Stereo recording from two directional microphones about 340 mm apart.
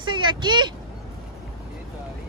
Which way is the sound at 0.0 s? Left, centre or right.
Centre.